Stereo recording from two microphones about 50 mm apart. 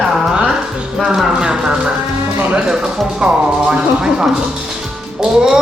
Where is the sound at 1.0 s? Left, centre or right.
Centre.